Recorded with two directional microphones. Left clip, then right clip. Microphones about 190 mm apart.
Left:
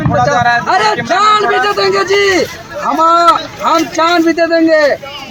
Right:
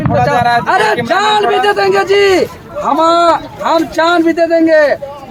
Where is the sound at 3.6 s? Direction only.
25° right (ahead or behind).